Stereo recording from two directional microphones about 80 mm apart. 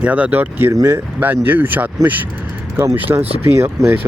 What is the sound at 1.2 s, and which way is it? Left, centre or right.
Speech, right.